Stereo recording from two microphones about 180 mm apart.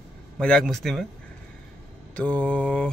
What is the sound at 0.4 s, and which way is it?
Speech, 5° left (ahead or behind).